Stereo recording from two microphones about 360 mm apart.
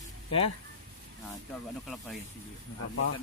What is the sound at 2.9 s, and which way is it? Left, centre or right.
Speech, left.